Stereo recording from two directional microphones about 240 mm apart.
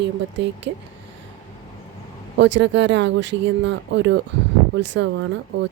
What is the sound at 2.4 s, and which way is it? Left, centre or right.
Speech, right.